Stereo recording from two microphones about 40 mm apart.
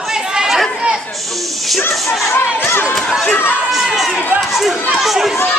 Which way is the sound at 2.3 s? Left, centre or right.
Left.